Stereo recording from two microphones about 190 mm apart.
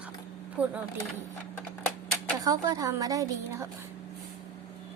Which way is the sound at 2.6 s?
20° right (ahead or behind).